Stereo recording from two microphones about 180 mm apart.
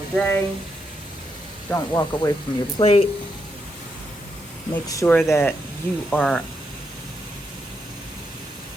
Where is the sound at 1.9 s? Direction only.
20° left (ahead or behind).